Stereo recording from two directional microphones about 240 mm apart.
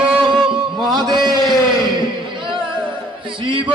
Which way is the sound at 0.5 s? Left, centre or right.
Centre.